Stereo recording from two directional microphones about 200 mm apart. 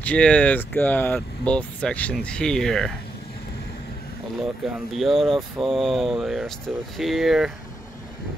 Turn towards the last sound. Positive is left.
turn(degrees=0)  # may be behind; listen again after turning